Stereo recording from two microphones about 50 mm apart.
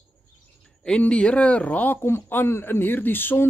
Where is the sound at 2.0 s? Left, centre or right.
Left.